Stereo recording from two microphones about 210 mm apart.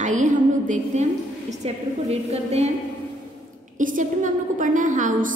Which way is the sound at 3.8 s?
40° right (ahead or behind).